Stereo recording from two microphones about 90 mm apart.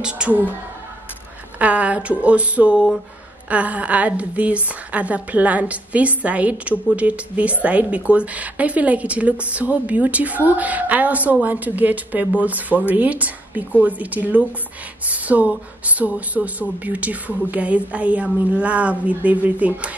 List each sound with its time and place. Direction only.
0.0 s a woman's voice: 10° right (ahead or behind)
1.6 s a woman's voice: 15° right (ahead or behind)